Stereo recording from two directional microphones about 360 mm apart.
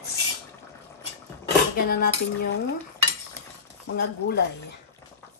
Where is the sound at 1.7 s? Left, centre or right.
Left.